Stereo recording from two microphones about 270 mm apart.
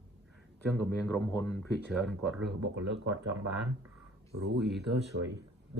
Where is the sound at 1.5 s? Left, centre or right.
Centre.